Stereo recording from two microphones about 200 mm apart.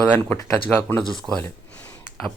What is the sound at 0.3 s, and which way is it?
Speech, 10° left (ahead or behind).